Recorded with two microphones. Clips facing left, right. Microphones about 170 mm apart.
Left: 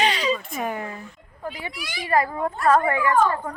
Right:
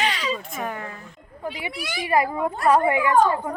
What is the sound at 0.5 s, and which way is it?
Speech, 15° left (ahead or behind).